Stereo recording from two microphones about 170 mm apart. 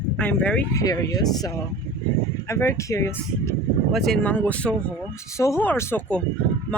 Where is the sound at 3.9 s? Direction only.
Centre (ahead or behind).